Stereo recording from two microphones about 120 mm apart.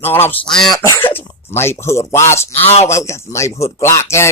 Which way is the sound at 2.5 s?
60° left (ahead or behind).